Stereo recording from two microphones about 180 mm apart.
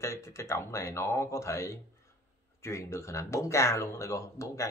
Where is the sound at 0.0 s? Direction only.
15° left (ahead or behind).